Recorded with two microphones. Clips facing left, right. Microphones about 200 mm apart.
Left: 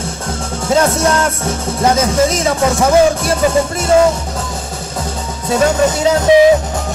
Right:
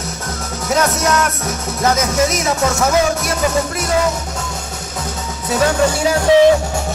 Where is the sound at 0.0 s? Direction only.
30° left (ahead or behind).